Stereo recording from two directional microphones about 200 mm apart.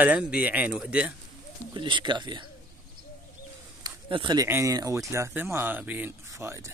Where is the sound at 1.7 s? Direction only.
25° right (ahead or behind).